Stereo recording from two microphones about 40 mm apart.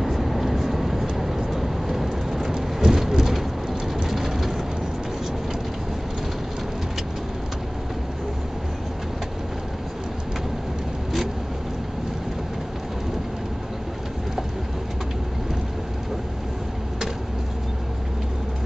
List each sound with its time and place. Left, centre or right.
0.0 s vehicle: centre
2.5 s rain: centre
3.9 s vehicle: centre